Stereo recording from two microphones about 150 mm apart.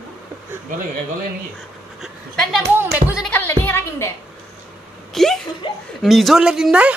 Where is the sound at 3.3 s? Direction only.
15° left (ahead or behind).